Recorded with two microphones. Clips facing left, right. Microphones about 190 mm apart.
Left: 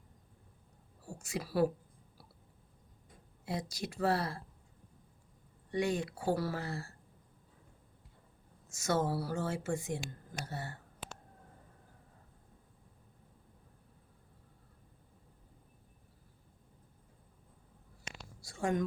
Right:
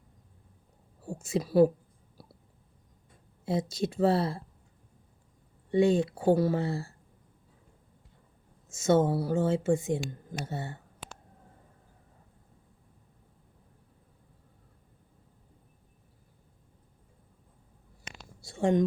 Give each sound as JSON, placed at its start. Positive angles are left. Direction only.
{"t": 1.0, "sound": "a woman's voice", "side_deg": -25}
{"t": 3.4, "sound": "speech", "side_deg": -25}
{"t": 5.7, "sound": "speech", "side_deg": -25}
{"t": 8.7, "sound": "speech", "side_deg": -25}
{"t": 18.4, "sound": "a sound", "side_deg": -25}